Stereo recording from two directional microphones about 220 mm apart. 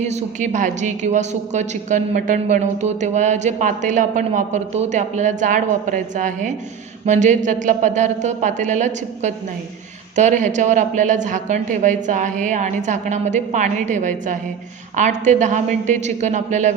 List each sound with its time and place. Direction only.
0.0 s a woman's voice: 30° right (ahead or behind)